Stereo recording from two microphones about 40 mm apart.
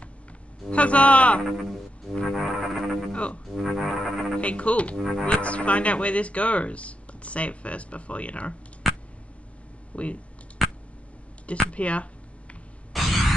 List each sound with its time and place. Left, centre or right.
0.7 s speech: left
1.4 s speech: centre
2.2 s music: centre
3.1 s speech: left
3.6 s music: centre
4.4 s speech: left
4.9 s speech: centre
5.2 s speech: left
8.8 s a sound: centre
9.9 s speech: left
10.6 s a sound: centre
11.7 s speech: left
12.9 s a sound: centre